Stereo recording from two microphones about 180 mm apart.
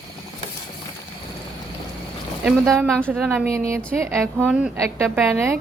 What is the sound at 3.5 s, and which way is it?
Speech, 15° right (ahead or behind).